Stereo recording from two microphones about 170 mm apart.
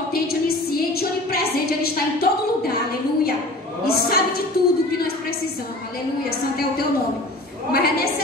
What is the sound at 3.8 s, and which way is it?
Speech, 65° left (ahead or behind).